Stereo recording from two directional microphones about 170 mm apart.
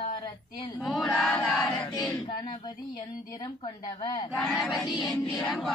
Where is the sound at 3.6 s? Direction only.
25° left (ahead or behind).